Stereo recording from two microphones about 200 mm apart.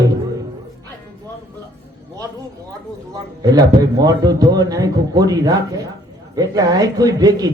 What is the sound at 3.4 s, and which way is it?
A man's voice, 20° right (ahead or behind).